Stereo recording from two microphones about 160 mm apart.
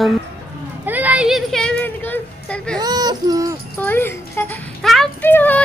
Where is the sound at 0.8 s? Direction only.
10° right (ahead or behind).